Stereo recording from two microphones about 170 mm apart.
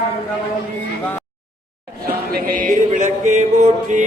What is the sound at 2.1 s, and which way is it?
Music, 60° right (ahead or behind).